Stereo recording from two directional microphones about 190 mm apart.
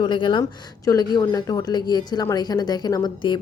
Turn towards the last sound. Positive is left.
turn(degrees=25)  # may be behind; listen again after turning